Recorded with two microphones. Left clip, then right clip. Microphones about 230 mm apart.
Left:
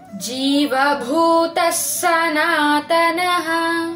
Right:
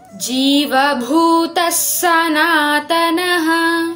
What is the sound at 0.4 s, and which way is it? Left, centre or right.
Child singing, right.